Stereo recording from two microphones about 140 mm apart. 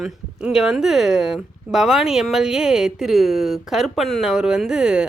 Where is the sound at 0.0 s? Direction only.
5° right (ahead or behind).